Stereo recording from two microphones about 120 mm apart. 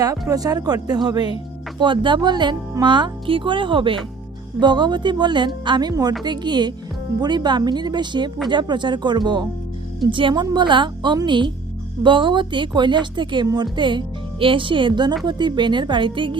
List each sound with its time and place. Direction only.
0.0 s a woman's voice: 30° right (ahead or behind)